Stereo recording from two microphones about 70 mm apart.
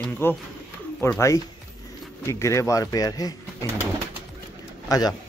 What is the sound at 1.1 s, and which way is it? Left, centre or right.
Speech, left.